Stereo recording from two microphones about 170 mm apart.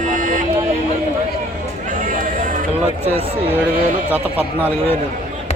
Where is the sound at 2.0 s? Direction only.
55° right (ahead or behind).